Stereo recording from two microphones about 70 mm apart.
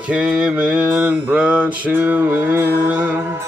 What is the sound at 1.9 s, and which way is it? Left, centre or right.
Mantra, right.